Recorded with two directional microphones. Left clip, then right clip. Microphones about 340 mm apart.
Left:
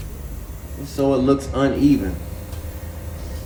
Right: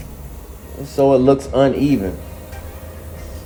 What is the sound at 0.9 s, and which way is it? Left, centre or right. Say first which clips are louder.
Speech: right 6 dB; right.